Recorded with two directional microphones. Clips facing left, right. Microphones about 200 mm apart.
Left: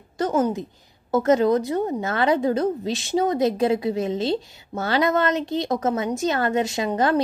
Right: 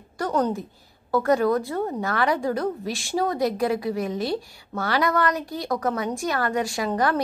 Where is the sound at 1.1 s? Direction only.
20° left (ahead or behind).